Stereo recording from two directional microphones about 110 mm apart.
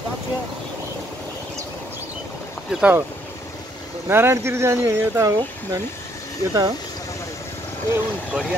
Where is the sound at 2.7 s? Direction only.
10° right (ahead or behind).